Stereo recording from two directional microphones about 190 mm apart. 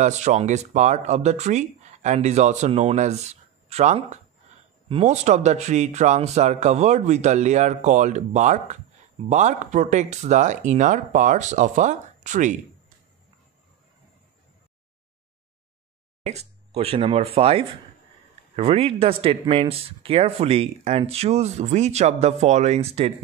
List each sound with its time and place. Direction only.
0.0 s speech: 40° right (ahead or behind)
16.3 s speech: 35° right (ahead or behind)